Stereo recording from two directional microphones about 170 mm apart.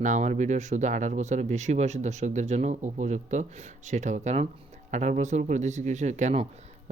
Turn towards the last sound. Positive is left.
turn(degrees=-40)  # may be behind; listen again after turning